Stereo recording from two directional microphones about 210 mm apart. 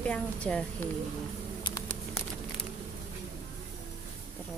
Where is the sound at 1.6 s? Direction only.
25° left (ahead or behind).